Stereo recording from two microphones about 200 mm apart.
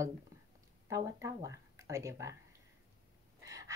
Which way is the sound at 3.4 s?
15° right (ahead or behind).